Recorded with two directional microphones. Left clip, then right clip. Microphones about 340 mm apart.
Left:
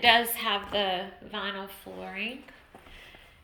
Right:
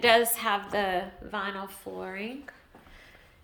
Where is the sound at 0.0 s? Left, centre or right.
Centre.